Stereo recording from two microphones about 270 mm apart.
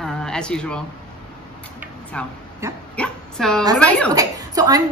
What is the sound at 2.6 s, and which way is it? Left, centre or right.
Speech, centre.